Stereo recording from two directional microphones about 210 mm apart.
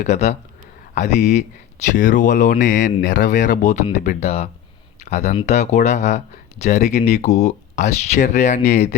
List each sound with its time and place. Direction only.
0.0 s speech: 35° left (ahead or behind)